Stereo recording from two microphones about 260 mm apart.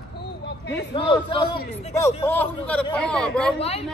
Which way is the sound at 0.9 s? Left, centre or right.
Centre.